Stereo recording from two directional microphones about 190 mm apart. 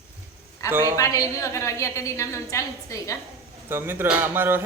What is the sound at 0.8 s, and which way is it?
A woman's voice, 15° left (ahead or behind).